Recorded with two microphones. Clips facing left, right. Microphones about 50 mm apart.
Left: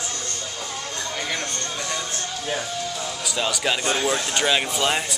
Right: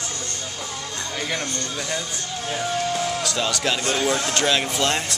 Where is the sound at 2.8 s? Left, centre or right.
Right.